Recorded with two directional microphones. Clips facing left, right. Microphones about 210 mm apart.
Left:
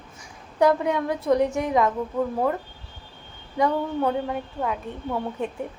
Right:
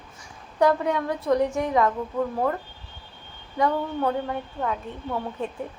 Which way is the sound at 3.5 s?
15° left (ahead or behind).